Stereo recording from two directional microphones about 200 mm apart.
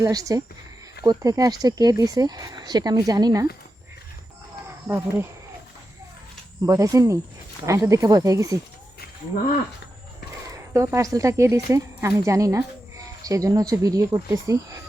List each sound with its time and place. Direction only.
0.0 s speech: 15° right (ahead or behind)
4.9 s speech: 10° right (ahead or behind)
6.6 s speech: 15° right (ahead or behind)
10.5 s speech: 15° right (ahead or behind)